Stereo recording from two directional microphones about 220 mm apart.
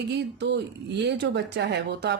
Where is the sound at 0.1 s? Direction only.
50° right (ahead or behind).